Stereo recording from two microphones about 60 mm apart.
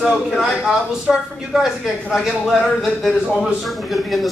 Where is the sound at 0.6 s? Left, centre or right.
Centre.